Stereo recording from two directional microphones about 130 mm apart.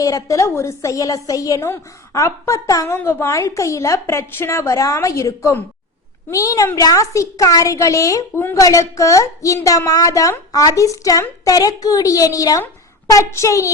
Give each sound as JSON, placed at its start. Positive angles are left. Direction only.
{"t": 0.0, "sound": "a woman's voice", "side_deg": 25}